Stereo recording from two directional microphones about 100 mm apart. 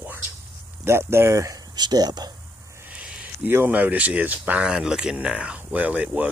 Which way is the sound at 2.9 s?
10° right (ahead or behind).